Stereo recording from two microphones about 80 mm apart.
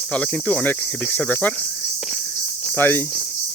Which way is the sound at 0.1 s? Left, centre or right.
Centre.